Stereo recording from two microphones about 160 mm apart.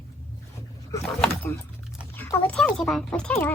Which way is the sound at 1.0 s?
5° left (ahead or behind).